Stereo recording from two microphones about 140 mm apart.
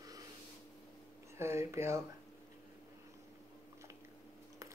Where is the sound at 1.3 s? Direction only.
20° right (ahead or behind).